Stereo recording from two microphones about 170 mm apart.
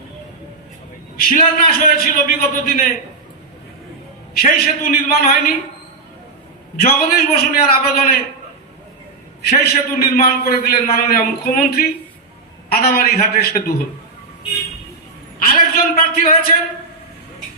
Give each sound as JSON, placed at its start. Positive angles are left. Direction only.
{"t": 1.1, "sound": "a man's voice", "side_deg": 60}
{"t": 4.4, "sound": "a man's voice", "side_deg": 65}
{"t": 6.7, "sound": "a man's voice", "side_deg": 65}
{"t": 9.4, "sound": "a man's voice", "side_deg": 65}
{"t": 15.7, "sound": "a man's voice", "side_deg": 60}